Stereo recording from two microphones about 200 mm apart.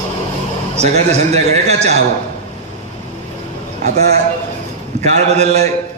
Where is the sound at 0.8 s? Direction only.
35° right (ahead or behind).